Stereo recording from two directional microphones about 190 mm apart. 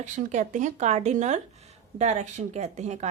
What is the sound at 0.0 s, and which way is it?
Speech, 40° right (ahead or behind).